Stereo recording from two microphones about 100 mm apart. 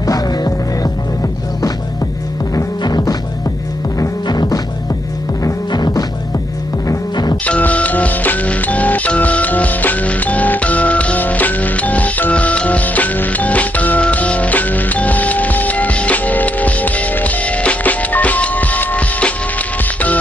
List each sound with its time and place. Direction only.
0.0 s music: 40° left (ahead or behind)
2.5 s music: 45° left (ahead or behind)
7.4 s music: 15° left (ahead or behind)